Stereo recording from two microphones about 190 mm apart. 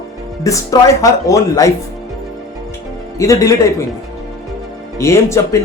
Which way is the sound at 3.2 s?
15° left (ahead or behind).